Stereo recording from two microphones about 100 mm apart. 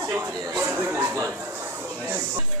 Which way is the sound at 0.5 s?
25° right (ahead or behind).